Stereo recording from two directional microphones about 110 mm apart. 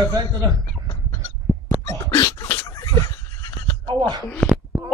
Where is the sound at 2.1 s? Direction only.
30° left (ahead or behind).